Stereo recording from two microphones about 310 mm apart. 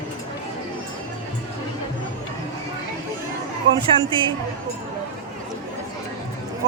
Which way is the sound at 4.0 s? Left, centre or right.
Centre.